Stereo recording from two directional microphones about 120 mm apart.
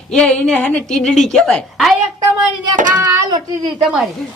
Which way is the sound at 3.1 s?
40° right (ahead or behind).